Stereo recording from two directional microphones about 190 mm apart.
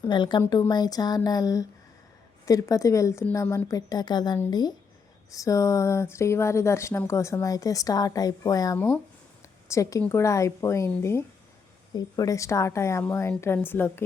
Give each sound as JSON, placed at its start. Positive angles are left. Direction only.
{"t": 0.0, "sound": "speech", "side_deg": 25}